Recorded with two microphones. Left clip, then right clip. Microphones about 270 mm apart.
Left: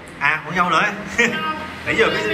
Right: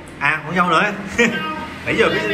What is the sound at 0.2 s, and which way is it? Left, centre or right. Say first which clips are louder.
A man's voice: right 1 dB; centre.